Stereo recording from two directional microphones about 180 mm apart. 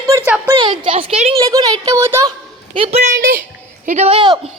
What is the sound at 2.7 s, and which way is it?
Speech, 30° right (ahead or behind).